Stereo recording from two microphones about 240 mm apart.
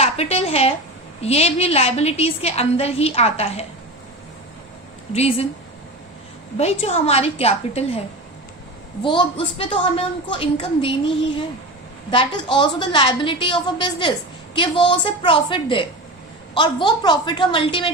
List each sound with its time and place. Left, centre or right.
0.0 s a sound: left
1.2 s a woman's voice: left
5.1 s a woman's voice: left
6.6 s a woman's voice: left
9.0 s a woman's voice: centre
12.1 s a woman's voice: left